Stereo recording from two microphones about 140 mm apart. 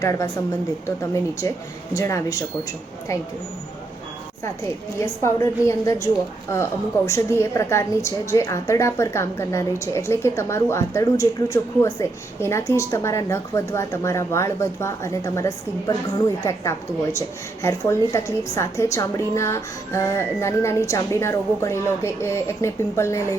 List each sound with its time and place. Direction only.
0.0 s a woman's voice: 20° left (ahead or behind)
4.9 s a woman's voice: 20° left (ahead or behind)